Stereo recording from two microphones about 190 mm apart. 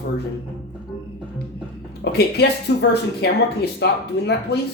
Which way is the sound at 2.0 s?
55° left (ahead or behind).